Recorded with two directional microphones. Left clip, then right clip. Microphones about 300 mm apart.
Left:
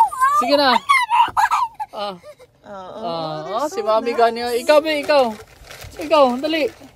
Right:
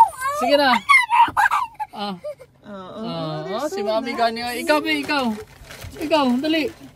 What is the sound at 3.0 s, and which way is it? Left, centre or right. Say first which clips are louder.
Speech: left 4 dB; left.